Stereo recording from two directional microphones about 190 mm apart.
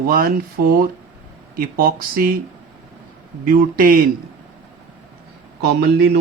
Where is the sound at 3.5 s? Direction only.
50° right (ahead or behind).